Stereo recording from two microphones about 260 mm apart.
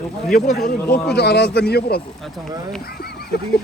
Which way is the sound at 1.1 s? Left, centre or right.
Left.